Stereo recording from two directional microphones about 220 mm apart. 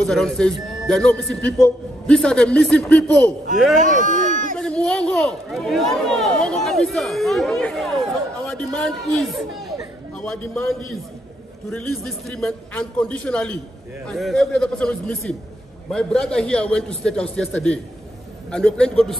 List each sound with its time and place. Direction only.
0.0 s speech: centre (ahead or behind)
3.8 s a sound: 35° right (ahead or behind)
4.6 s a man's voice: 5° left (ahead or behind)
12.3 s speech: 5° left (ahead or behind)